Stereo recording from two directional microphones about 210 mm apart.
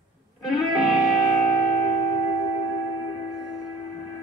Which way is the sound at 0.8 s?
Centre (ahead or behind).